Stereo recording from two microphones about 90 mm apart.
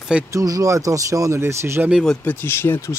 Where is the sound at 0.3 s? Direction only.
40° right (ahead or behind).